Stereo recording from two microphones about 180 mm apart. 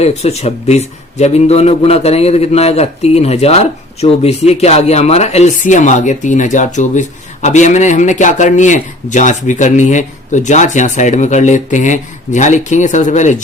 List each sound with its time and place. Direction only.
0.0 s a man's voice: 35° left (ahead or behind)